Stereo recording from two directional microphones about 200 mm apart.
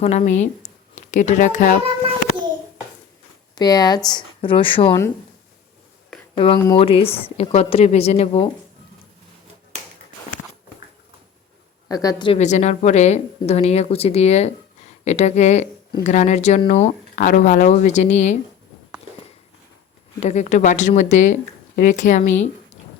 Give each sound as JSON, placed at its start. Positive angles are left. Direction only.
{"t": 0.0, "sound": "speech", "side_deg": 35}
{"t": 3.5, "sound": "a woman's voice", "side_deg": 20}
{"t": 6.3, "sound": "a woman's voice", "side_deg": 30}
{"t": 11.9, "sound": "a woman's voice", "side_deg": 20}
{"t": 12.4, "sound": "speech", "side_deg": 35}
{"t": 20.1, "sound": "speech", "side_deg": 35}